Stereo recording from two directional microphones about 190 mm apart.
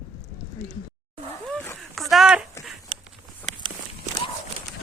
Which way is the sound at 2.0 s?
Centre (ahead or behind).